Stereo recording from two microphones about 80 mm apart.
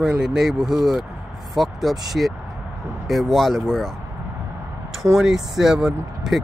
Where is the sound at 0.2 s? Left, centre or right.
Centre.